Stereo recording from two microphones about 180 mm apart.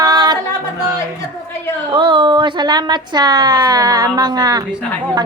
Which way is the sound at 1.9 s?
25° right (ahead or behind).